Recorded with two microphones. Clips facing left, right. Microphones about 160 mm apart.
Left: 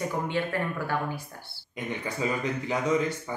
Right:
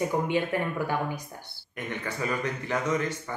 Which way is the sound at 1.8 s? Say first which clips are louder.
Left 1 dB; 10° left (ahead or behind).